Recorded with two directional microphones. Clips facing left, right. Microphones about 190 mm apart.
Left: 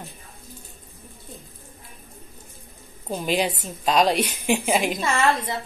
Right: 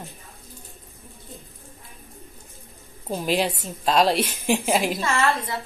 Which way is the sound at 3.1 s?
Centre (ahead or behind).